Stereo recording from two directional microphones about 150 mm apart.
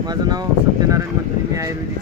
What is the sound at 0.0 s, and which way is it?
Speech, 25° right (ahead or behind).